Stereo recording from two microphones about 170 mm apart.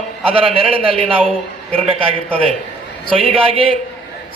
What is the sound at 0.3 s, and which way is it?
Speech, 35° right (ahead or behind).